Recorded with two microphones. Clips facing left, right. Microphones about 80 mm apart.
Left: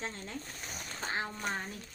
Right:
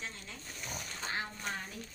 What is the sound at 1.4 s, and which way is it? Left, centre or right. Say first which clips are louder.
Speech: left 4 dB; left.